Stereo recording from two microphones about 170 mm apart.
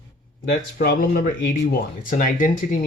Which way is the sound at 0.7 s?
65° left (ahead or behind).